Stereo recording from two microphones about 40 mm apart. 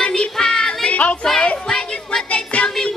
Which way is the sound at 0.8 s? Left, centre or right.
Left.